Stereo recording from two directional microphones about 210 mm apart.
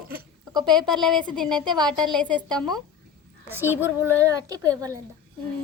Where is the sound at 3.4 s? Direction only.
10° right (ahead or behind).